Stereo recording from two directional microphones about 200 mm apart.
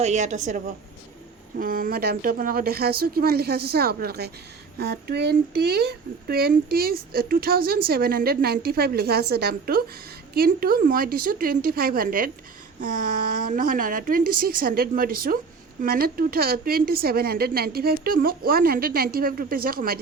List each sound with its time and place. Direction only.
0.0 s a woman's voice: 35° right (ahead or behind)